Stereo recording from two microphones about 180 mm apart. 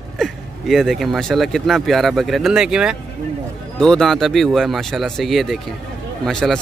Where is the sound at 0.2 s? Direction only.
Centre (ahead or behind).